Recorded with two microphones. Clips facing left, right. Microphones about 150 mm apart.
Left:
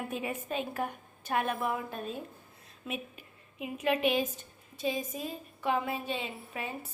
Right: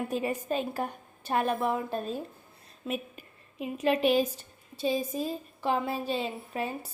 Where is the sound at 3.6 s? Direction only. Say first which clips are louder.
Right 3 dB; 35° right (ahead or behind).